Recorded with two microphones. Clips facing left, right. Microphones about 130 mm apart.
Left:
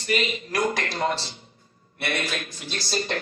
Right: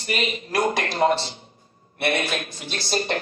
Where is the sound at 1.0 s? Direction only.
60° right (ahead or behind).